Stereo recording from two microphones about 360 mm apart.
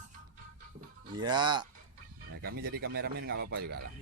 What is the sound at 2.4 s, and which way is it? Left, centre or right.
Speech, right.